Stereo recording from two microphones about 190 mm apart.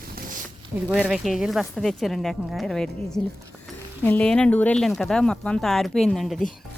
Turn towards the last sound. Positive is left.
turn(degrees=0)  # may be behind; listen again after turning